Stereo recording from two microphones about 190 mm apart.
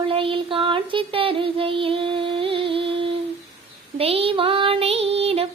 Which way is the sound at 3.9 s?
30° right (ahead or behind).